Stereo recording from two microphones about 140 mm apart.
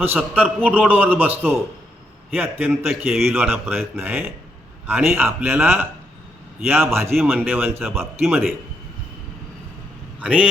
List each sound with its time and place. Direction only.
0.0 s a man's voice: 15° right (ahead or behind)
3.2 s a man's voice: 15° right (ahead or behind)
10.2 s speech: 10° right (ahead or behind)